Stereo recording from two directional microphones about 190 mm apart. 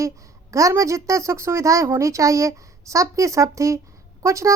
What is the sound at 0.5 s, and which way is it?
Speech, 15° right (ahead or behind).